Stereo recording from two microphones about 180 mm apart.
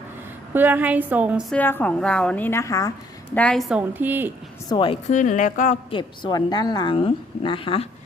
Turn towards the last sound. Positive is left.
turn(degrees=30)  # may be behind; listen again after turning